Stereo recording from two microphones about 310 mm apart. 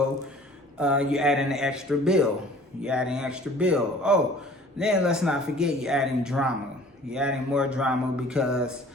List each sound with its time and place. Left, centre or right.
0.8 s speech: centre